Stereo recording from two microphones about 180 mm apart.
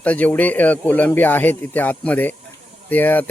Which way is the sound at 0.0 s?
10° left (ahead or behind).